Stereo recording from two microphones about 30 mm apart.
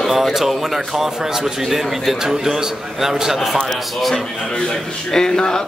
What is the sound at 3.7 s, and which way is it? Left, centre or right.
Speech, centre.